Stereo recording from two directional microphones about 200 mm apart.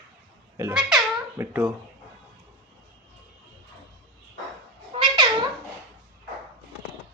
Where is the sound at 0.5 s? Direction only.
10° right (ahead or behind).